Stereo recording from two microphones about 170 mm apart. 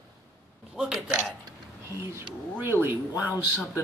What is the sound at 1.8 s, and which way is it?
Speech, 15° right (ahead or behind).